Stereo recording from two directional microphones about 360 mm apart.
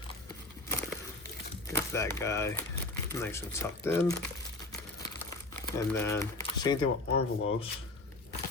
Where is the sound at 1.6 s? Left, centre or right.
Centre.